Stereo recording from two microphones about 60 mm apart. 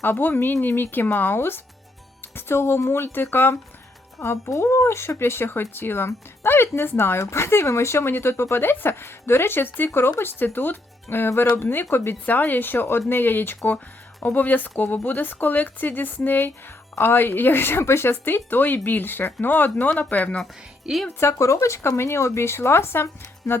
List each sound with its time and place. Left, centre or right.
0.0 s speech: left
4.4 s speech: left
20.9 s speech: centre
21.2 s speech: left